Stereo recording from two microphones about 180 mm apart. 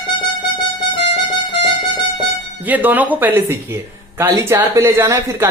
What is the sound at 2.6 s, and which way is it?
A woman's voice, 10° right (ahead or behind).